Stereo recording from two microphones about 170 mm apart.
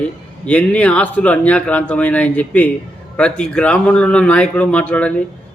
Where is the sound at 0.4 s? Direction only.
5° left (ahead or behind).